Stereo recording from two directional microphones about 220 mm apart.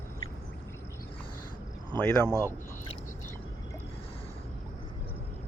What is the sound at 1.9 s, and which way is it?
Speech, 10° left (ahead or behind).